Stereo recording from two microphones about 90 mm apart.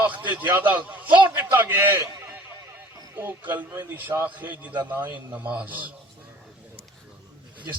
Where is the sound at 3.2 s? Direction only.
20° right (ahead or behind).